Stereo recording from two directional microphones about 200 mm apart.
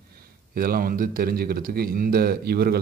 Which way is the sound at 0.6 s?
45° right (ahead or behind).